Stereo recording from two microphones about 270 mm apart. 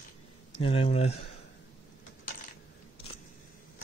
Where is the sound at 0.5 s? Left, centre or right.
Left.